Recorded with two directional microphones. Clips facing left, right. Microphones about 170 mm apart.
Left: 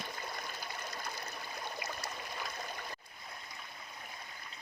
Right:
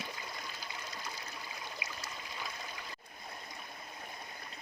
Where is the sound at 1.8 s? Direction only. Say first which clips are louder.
Left 4 dB; 55° left (ahead or behind).